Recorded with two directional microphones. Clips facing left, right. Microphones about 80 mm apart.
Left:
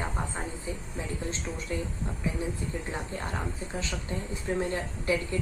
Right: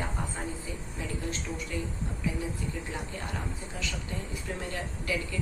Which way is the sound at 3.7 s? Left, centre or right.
Left.